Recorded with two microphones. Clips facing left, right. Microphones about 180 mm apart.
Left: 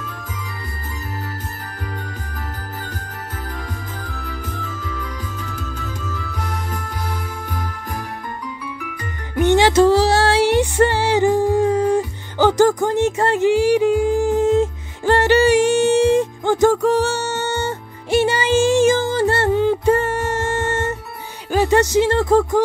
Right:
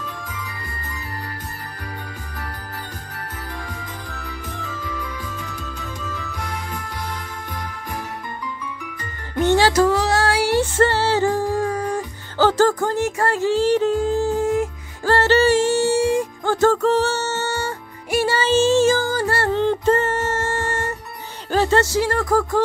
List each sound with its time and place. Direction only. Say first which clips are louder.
9.3 s music: left 2 dB; 15° left (ahead or behind)
19.6 s music: left 2 dB; 10° left (ahead or behind)
21.5 s speech: left 2 dB; 15° left (ahead or behind)